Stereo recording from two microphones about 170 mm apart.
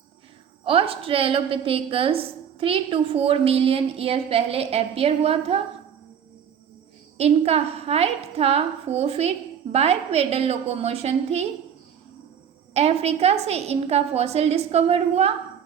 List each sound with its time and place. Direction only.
0.6 s a woman's voice: 30° right (ahead or behind)
7.2 s a woman's voice: 40° right (ahead or behind)
12.7 s a woman's voice: 40° right (ahead or behind)